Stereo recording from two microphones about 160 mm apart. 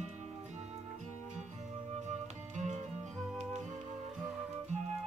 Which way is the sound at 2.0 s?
50° right (ahead or behind).